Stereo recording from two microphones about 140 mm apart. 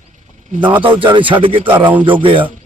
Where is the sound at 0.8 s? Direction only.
40° right (ahead or behind).